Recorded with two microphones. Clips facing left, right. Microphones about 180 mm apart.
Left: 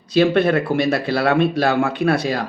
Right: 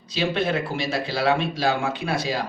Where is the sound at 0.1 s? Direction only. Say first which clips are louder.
Left 9 dB; 60° left (ahead or behind).